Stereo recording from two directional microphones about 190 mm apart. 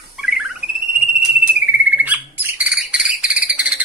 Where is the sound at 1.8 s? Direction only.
10° right (ahead or behind).